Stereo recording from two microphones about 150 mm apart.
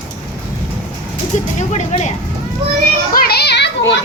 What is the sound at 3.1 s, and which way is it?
Children playing, 90° left.